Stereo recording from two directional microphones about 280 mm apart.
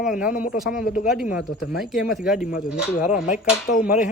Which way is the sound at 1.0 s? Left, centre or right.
Centre.